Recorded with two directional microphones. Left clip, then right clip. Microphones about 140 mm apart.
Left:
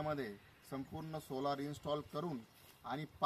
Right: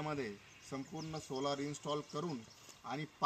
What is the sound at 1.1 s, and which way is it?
Speech, 15° left (ahead or behind).